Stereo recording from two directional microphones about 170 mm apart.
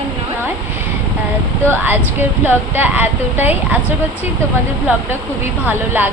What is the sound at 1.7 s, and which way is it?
Speech, 10° right (ahead or behind).